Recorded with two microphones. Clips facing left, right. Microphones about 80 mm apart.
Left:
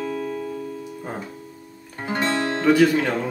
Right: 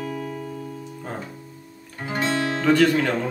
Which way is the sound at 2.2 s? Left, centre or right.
Centre.